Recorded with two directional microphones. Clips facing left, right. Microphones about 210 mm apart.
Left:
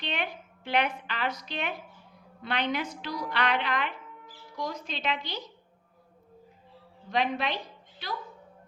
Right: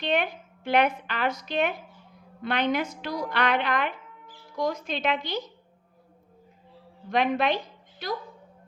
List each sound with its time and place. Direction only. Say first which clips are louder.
0.0 s a sound: right 8 dB; 45° right (ahead or behind)
2.4 s a woman's voice: right 4 dB; 50° right (ahead or behind)
7.1 s a woman's voice: right 5 dB; 55° right (ahead or behind)